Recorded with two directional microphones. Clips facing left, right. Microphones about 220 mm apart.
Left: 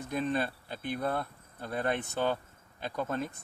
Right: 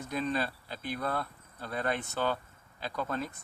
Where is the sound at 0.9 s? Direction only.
25° left (ahead or behind).